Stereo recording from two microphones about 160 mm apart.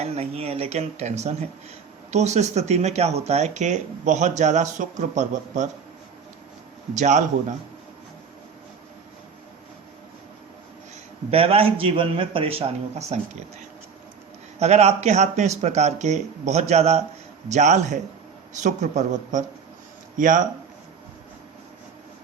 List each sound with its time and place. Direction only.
0.0 s speech: 40° right (ahead or behind)
6.9 s speech: 50° right (ahead or behind)
11.3 s a man's voice: 35° right (ahead or behind)
14.6 s speech: 40° right (ahead or behind)